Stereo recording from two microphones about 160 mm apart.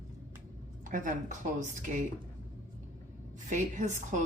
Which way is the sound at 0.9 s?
55° right (ahead or behind).